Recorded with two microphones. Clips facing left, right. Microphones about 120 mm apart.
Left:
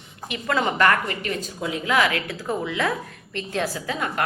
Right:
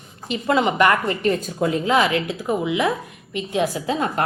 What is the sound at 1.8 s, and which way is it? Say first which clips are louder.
A woman's voice: right 1 dB; 25° right (ahead or behind).